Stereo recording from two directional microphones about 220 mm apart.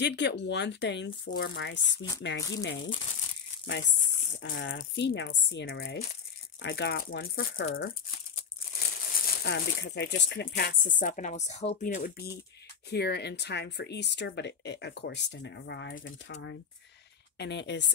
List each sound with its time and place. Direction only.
0.0 s speech: 50° left (ahead or behind)
4.4 s speech: 55° left (ahead or behind)
7.3 s speech: 40° left (ahead or behind)
8.4 s crumpling: 40° left (ahead or behind)
11.0 s a woman's voice: 35° left (ahead or behind); by 17.8 s 55° left (ahead or behind)